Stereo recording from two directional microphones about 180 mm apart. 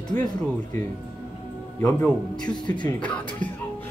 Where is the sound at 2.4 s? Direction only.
25° left (ahead or behind).